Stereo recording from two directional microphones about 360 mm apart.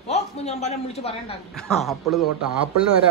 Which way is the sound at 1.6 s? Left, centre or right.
Centre.